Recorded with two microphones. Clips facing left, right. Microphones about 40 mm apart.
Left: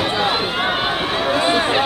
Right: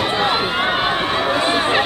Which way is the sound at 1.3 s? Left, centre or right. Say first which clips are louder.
Left 2 dB; centre.